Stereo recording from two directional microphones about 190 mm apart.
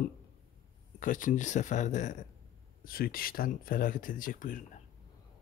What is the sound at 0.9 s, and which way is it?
Speech, 45° left (ahead or behind).